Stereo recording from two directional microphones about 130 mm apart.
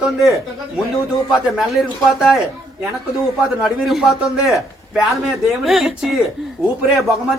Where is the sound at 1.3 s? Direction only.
Centre (ahead or behind).